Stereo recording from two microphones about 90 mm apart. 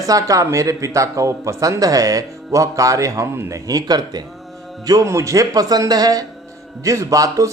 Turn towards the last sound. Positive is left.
turn(degrees=-40)  # may be behind; listen again after turning